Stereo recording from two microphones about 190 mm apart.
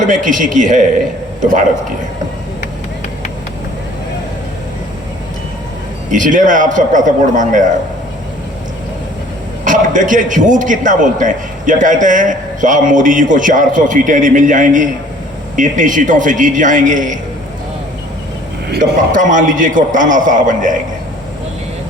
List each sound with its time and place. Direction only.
0.1 s a man's voice: 45° right (ahead or behind)
6.1 s a man's voice: 45° right (ahead or behind)
9.6 s a man's voice: 45° right (ahead or behind)
18.8 s a man's voice: 45° right (ahead or behind)